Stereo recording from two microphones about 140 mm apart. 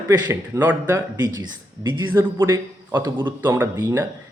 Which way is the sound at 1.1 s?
30° right (ahead or behind).